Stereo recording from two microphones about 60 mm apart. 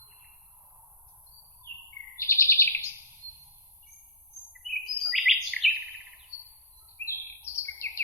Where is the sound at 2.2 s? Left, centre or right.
Left.